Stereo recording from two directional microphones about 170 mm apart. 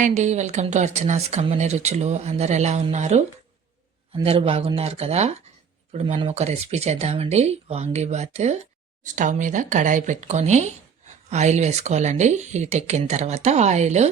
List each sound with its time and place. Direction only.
0.0 s speech: 40° right (ahead or behind)